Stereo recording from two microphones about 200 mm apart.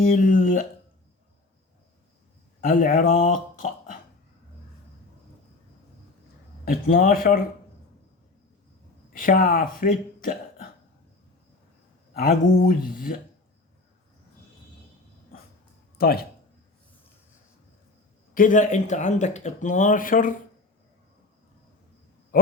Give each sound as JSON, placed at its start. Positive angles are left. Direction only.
{"t": 0.0, "sound": "speech", "side_deg": 45}
{"t": 2.6, "sound": "speech", "side_deg": 40}
{"t": 6.7, "sound": "speech", "side_deg": 45}
{"t": 9.1, "sound": "speech", "side_deg": 45}
{"t": 12.1, "sound": "speech", "side_deg": 45}
{"t": 16.0, "sound": "speech", "side_deg": 50}
{"t": 18.3, "sound": "speech", "side_deg": 40}